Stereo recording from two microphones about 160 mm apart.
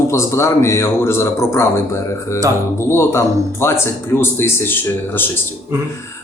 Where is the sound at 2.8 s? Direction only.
15° left (ahead or behind).